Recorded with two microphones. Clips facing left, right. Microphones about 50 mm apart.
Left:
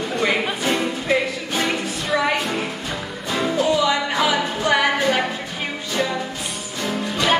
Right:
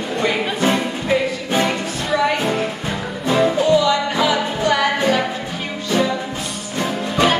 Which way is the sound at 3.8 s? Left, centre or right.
Centre.